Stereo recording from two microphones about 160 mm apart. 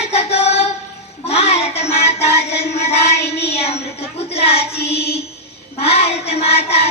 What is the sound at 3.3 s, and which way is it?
Child singing, 90° left.